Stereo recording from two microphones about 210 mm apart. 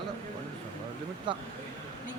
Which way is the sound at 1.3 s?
20° right (ahead or behind).